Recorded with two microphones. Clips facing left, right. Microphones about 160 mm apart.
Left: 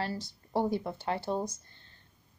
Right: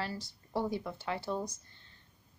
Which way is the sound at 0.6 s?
35° left (ahead or behind).